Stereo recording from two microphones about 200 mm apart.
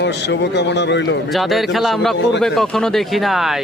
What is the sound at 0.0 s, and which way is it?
A man's voice, 60° left (ahead or behind).